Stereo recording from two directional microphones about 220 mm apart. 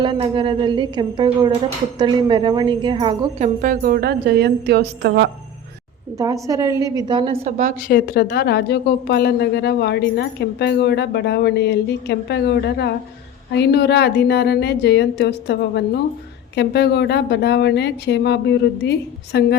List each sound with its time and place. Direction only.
0.0 s a woman's voice: 20° right (ahead or behind); by 5.3 s 50° right (ahead or behind)
6.1 s a woman's voice: 15° right (ahead or behind); by 7.7 s 30° right (ahead or behind)
7.9 s a woman's voice: 45° left (ahead or behind)